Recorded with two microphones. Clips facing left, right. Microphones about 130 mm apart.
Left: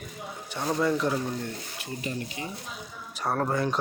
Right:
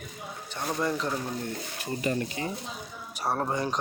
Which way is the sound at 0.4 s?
15° left (ahead or behind).